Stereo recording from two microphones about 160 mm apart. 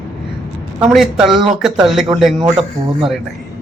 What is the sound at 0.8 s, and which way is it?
A woman's voice, 5° right (ahead or behind).